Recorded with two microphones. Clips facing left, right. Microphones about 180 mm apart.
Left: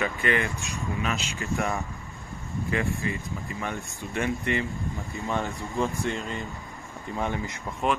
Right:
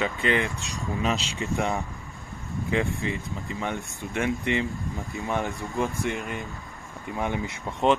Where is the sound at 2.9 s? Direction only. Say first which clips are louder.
Right 1 dB; 20° right (ahead or behind).